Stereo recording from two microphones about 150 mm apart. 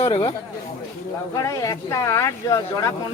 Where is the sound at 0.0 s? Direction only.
35° left (ahead or behind).